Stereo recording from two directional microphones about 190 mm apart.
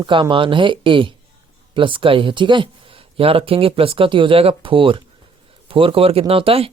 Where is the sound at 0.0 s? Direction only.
25° right (ahead or behind).